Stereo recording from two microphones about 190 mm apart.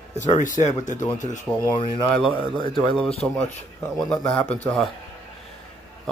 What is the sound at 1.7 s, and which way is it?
Speech, 25° left (ahead or behind).